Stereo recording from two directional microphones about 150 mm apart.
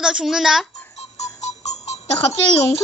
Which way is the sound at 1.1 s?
50° left (ahead or behind).